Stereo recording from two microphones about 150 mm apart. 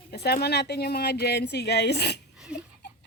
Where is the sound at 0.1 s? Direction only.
90° left.